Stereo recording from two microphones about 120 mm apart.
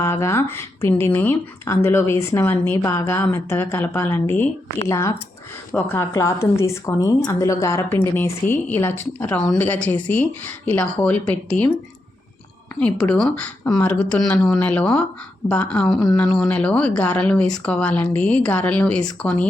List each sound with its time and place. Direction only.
0.0 s a woman's voice: 20° left (ahead or behind)
13.1 s a woman's voice: 5° left (ahead or behind)